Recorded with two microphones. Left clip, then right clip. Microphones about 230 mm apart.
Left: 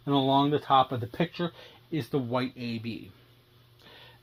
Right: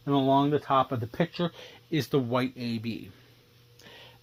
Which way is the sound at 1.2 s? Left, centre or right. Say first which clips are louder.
Right 2 dB; right.